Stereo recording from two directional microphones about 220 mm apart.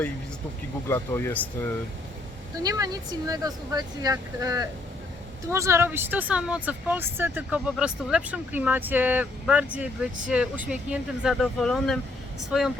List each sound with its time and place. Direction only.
0.9 s speech: 10° left (ahead or behind)
2.6 s speech: 15° right (ahead or behind); by 12.7 s centre (ahead or behind)